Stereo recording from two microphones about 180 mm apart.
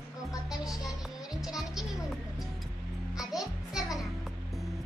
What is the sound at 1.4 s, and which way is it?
Music, centre (ahead or behind).